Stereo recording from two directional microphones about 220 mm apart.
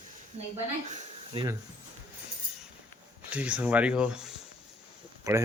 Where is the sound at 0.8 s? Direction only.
30° right (ahead or behind).